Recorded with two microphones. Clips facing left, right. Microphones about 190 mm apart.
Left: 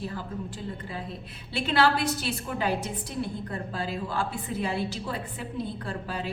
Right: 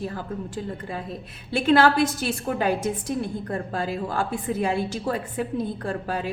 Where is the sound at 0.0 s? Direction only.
50° right (ahead or behind).